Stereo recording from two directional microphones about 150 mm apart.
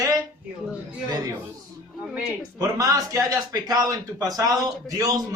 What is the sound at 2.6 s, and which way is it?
A man's voice, 25° right (ahead or behind).